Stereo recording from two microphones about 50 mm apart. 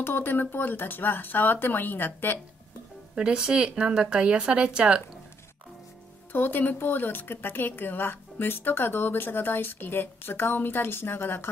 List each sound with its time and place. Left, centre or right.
0.0 s speech: left
3.2 s speech: centre
6.3 s speech: left